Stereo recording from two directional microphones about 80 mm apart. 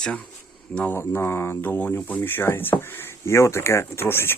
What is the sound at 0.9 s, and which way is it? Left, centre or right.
Speech, left.